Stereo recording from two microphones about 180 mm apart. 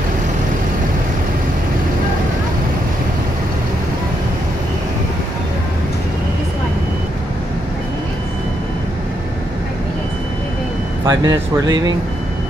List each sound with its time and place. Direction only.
11.1 s speech: 20° right (ahead or behind)